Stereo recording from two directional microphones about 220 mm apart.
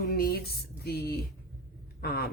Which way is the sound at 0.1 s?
45° left (ahead or behind).